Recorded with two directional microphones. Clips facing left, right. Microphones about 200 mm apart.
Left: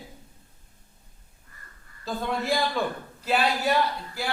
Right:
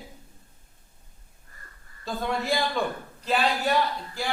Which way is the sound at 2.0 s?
Centre (ahead or behind).